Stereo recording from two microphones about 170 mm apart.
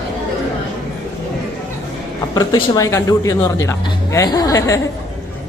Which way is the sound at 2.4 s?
20° left (ahead or behind).